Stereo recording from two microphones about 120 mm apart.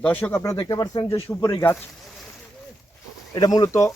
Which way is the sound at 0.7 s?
35° left (ahead or behind).